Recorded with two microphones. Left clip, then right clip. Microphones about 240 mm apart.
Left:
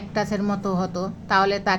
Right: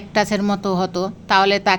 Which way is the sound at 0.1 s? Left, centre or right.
Right.